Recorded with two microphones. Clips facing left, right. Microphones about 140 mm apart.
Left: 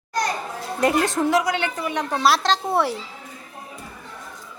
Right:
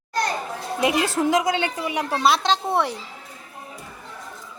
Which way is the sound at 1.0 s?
5° right (ahead or behind).